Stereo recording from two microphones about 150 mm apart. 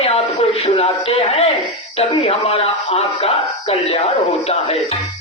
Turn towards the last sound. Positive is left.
turn(degrees=45)  # may be behind; listen again after turning